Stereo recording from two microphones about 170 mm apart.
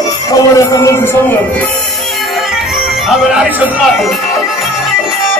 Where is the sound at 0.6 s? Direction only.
15° left (ahead or behind).